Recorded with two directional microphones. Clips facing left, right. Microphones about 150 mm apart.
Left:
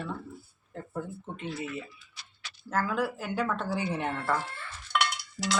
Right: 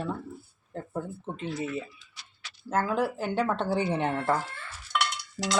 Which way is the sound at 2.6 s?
25° right (ahead or behind).